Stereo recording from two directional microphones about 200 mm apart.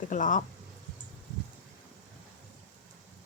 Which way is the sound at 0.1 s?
40° left (ahead or behind).